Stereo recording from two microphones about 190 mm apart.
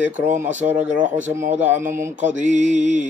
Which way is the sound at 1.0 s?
40° right (ahead or behind).